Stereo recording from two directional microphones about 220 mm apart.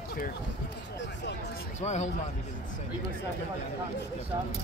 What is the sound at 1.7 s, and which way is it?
Speech, 30° left (ahead or behind).